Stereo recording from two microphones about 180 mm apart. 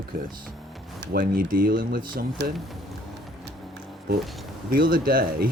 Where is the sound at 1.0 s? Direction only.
55° right (ahead or behind).